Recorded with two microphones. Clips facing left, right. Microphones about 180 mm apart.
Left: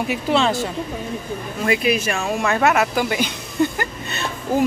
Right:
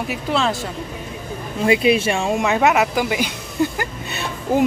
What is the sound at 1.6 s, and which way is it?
Speech, 25° right (ahead or behind).